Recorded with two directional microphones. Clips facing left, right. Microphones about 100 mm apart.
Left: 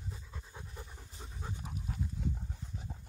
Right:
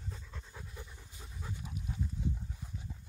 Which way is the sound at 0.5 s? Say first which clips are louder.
Left 1 dB; 30° left (ahead or behind).